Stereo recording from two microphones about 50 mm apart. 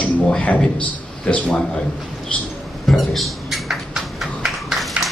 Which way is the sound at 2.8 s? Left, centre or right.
Centre.